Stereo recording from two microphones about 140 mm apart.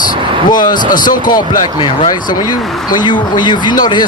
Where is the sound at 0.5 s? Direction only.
30° left (ahead or behind).